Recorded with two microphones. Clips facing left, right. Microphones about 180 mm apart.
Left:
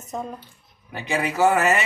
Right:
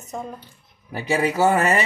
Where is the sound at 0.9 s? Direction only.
35° right (ahead or behind).